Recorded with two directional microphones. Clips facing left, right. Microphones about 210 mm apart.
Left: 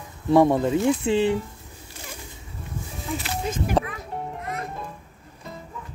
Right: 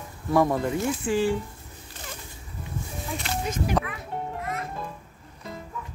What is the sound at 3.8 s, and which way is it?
Speech, 30° left (ahead or behind).